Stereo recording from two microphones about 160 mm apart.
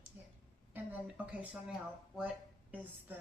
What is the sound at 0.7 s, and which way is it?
Speech, 10° right (ahead or behind).